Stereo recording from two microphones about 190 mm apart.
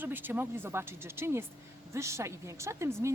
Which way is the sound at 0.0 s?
10° right (ahead or behind).